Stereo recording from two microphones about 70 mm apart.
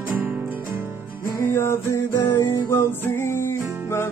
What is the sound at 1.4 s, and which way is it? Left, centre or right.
Music, left.